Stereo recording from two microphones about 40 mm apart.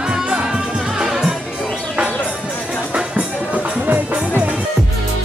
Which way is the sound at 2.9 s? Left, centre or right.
Right.